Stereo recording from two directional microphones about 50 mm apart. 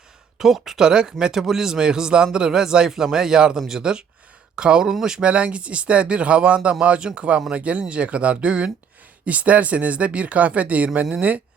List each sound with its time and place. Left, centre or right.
0.3 s speech: centre
0.9 s a man's voice: centre
5.2 s speech: right